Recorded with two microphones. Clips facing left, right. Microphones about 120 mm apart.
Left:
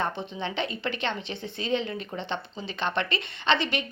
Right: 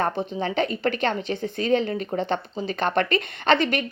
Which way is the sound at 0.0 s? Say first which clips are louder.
Right 5 dB; 40° right (ahead or behind).